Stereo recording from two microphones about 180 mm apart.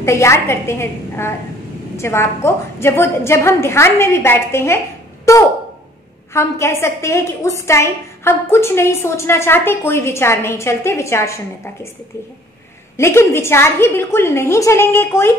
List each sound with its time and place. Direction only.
0.0 s a woman's voice: 15° left (ahead or behind)
12.9 s a woman's voice: 15° left (ahead or behind)